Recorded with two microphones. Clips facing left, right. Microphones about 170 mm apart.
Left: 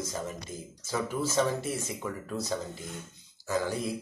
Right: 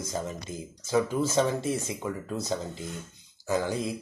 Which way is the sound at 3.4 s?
20° right (ahead or behind).